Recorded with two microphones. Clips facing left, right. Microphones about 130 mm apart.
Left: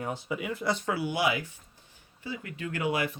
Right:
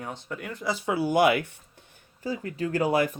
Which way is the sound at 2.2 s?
40° right (ahead or behind).